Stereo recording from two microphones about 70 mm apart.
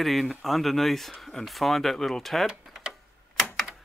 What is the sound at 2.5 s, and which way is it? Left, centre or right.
Tick-tock, centre.